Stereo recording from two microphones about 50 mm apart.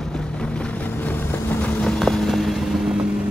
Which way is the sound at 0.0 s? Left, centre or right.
Centre.